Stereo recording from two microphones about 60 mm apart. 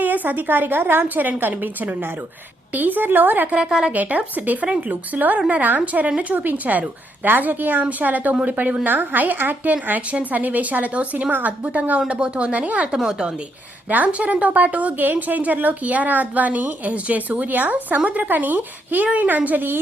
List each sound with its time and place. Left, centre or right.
0.0 s a woman's voice: right
3.5 s a woman's voice: centre
3.9 s a woman's voice: right
13.0 s a woman's voice: centre
13.9 s a woman's voice: right